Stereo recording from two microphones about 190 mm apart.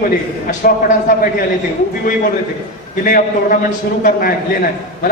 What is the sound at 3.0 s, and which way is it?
A man's voice, 45° left (ahead or behind).